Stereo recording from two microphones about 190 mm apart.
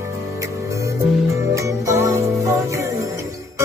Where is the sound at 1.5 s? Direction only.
15° right (ahead or behind).